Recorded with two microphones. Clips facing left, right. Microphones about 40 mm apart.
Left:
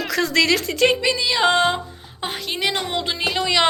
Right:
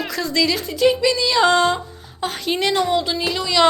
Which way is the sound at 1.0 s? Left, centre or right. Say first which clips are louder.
Right 2 dB; centre.